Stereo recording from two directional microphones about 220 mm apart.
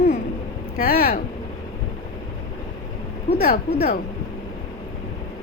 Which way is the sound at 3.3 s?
45° left (ahead or behind).